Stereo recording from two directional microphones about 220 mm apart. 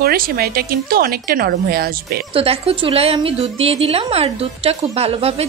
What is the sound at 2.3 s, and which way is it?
A woman's voice, 25° right (ahead or behind).